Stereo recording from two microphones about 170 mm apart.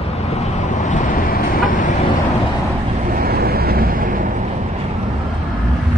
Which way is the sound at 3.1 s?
65° right (ahead or behind).